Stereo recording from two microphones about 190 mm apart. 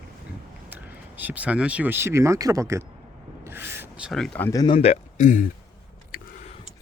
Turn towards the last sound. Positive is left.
turn(degrees=45)  # may be behind; listen again after turning